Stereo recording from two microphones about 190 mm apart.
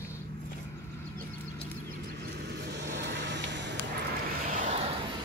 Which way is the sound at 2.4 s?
60° right (ahead or behind).